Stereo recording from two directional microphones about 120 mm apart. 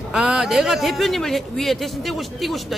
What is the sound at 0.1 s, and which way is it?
Speech, 5° right (ahead or behind).